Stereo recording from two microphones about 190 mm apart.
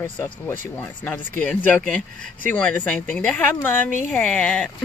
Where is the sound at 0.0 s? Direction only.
10° left (ahead or behind).